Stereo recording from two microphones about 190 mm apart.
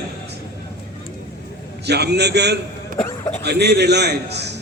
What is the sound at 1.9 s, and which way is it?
A man's voice, 60° right (ahead or behind).